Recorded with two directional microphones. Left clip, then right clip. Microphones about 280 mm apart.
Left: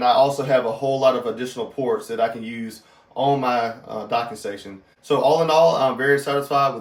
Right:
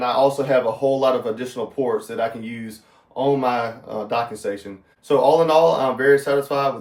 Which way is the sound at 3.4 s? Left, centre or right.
Centre.